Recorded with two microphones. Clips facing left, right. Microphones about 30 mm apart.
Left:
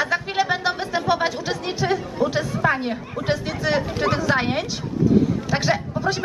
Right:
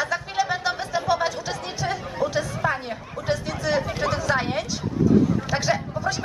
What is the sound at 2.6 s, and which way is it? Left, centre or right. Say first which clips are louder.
Speech: left 4 dB; left.